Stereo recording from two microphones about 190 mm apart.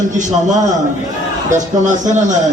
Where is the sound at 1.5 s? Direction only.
40° right (ahead or behind).